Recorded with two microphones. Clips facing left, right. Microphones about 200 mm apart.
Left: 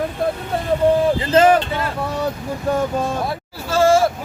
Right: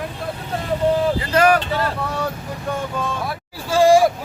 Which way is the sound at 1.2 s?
25° left (ahead or behind).